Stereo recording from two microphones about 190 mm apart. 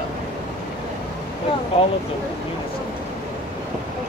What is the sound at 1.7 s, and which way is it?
Speech, 30° left (ahead or behind).